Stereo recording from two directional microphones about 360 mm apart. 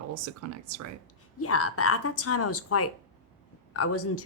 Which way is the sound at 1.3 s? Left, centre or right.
Left.